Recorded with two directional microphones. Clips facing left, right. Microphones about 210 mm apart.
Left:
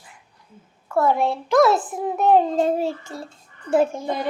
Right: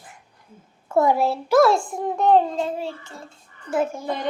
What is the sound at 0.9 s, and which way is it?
Speech, 20° right (ahead or behind).